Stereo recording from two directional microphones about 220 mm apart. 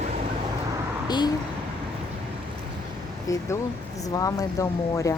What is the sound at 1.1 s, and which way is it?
Speech, 20° left (ahead or behind).